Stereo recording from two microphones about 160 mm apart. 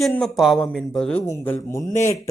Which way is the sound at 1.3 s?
15° left (ahead or behind).